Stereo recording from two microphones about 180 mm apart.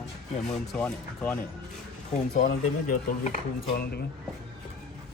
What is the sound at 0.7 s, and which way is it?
Speech, 5° left (ahead or behind).